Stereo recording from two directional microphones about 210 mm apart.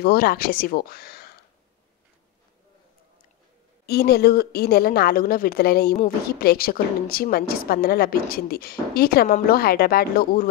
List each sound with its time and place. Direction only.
0.0 s a woman's voice: 45° left (ahead or behind)
3.8 s a woman's voice: 50° left (ahead or behind)